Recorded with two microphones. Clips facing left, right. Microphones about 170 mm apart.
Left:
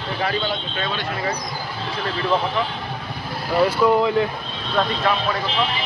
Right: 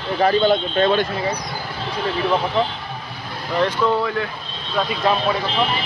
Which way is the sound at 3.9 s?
20° left (ahead or behind).